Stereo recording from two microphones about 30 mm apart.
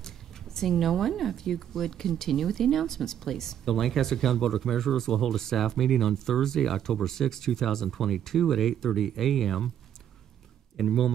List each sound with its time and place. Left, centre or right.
0.0 s a sound: centre
0.7 s speech: centre
1.3 s speech: centre
8.4 s speech: centre
10.8 s speech: centre